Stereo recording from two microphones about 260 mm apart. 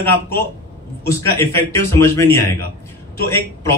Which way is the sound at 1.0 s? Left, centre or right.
Centre.